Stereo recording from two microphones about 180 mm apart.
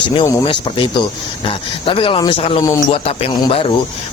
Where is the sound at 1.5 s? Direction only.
30° left (ahead or behind).